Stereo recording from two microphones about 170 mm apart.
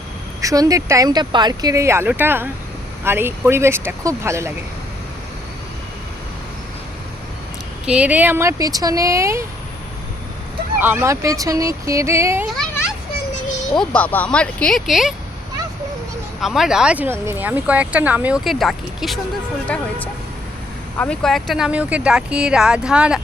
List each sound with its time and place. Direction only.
0.4 s speech: 20° right (ahead or behind)
7.9 s speech: 5° right (ahead or behind)
10.8 s speech: 10° right (ahead or behind)
13.7 s speech: 10° left (ahead or behind)
16.4 s speech: centre (ahead or behind)
21.0 s speech: 5° left (ahead or behind)